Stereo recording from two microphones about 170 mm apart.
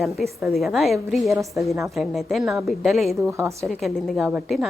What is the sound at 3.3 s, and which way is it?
Speech, 15° right (ahead or behind).